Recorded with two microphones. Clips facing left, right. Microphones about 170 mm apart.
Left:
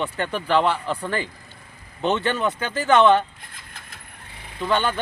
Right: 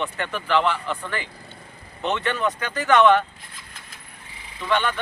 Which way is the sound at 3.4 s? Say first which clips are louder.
Even; 55° left (ahead or behind).